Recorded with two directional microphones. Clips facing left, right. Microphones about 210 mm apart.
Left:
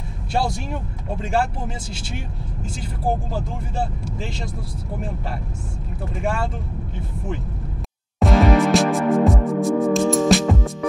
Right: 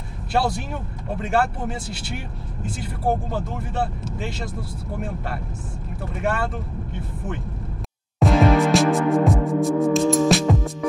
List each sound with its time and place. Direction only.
1.2 s speech: 5° right (ahead or behind)
6.1 s speech: centre (ahead or behind)
8.2 s music: centre (ahead or behind)